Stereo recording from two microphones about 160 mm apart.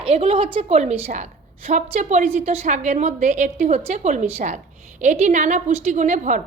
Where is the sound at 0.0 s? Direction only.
35° right (ahead or behind).